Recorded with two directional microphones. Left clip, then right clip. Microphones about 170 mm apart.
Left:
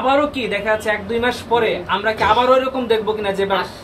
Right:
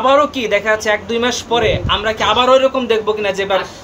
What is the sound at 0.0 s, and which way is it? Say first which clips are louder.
A man's voice: right 4 dB; 45° right (ahead or behind).